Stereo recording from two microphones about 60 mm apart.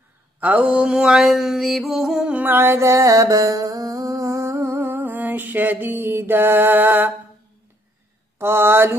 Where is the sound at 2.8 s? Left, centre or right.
Right.